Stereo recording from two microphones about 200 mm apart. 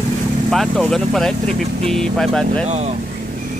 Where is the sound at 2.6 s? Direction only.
30° right (ahead or behind).